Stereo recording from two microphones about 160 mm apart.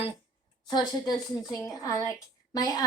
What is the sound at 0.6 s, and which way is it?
Speech, 25° left (ahead or behind).